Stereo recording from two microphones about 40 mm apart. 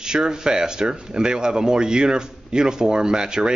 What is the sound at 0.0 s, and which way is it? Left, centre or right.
Speech, centre.